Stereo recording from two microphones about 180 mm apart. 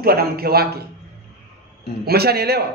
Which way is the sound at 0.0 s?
55° right (ahead or behind).